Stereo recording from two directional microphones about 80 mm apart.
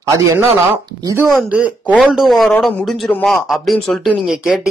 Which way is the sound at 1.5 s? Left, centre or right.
Centre.